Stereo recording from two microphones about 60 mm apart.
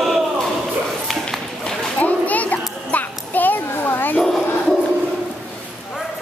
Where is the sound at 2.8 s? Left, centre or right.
Left.